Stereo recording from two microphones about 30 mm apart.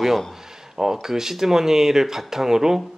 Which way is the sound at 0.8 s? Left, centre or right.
Centre.